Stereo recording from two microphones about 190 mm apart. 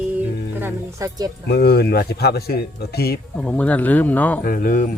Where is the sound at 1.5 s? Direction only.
55° left (ahead or behind).